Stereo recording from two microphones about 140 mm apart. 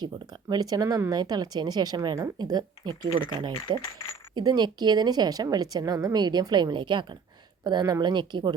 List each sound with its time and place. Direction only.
0.0 s speech: 30° right (ahead or behind)